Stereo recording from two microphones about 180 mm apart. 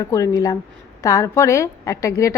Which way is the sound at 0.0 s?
20° left (ahead or behind).